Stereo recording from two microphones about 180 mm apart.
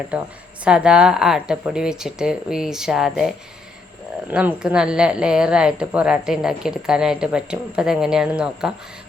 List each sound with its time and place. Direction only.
0.1 s a woman's voice: 5° right (ahead or behind)